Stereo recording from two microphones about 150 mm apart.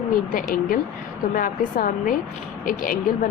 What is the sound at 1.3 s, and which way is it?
A woman's voice, 65° left (ahead or behind).